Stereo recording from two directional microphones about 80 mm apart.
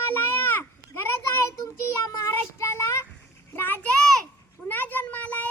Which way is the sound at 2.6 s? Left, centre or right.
Left.